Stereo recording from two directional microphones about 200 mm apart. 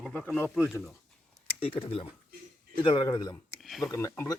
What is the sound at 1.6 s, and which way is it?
A man's voice, 25° left (ahead or behind).